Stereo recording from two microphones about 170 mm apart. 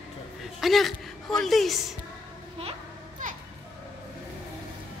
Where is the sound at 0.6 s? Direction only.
Centre (ahead or behind).